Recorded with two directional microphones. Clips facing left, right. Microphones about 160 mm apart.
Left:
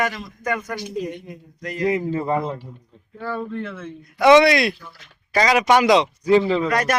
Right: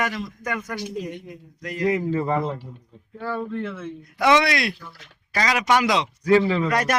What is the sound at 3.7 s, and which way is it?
Speech, 5° right (ahead or behind).